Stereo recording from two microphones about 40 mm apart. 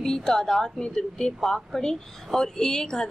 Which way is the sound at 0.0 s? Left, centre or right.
Centre.